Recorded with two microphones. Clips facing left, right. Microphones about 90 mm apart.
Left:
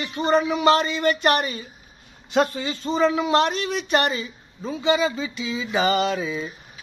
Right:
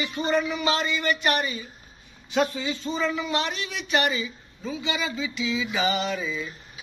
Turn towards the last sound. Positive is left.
turn(degrees=60)  # may be behind; listen again after turning